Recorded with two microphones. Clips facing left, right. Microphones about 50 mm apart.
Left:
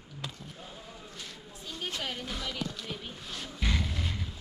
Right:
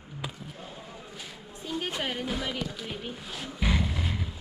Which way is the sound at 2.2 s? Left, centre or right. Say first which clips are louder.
Right 5 dB; centre.